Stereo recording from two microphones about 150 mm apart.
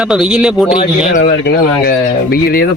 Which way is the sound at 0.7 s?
70° left (ahead or behind).